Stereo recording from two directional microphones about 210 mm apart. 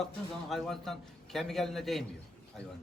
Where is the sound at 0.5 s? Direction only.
Centre (ahead or behind).